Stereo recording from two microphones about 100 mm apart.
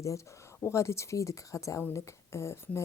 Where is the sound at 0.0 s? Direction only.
30° left (ahead or behind).